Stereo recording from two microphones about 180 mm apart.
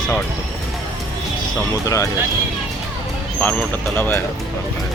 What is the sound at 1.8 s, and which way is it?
Speech, 20° left (ahead or behind).